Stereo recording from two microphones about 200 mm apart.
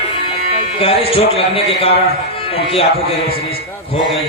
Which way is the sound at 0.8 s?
30° left (ahead or behind).